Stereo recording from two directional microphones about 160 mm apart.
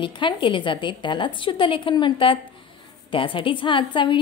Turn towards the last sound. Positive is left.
turn(degrees=30)  # may be behind; listen again after turning